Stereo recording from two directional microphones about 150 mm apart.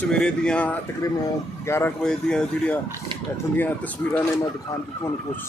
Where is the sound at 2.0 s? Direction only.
5° left (ahead or behind).